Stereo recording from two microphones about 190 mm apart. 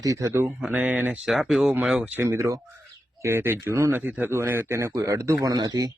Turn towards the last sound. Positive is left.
turn(degrees=-20)  # may be behind; listen again after turning